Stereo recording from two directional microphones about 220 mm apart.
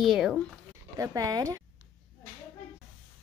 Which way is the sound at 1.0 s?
15° right (ahead or behind).